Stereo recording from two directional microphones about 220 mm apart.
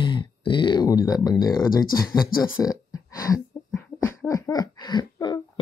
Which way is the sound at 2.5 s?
15° left (ahead or behind).